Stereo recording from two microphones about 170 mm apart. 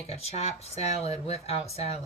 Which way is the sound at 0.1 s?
35° left (ahead or behind).